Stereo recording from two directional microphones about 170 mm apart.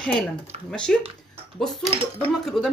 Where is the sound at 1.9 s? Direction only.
35° right (ahead or behind).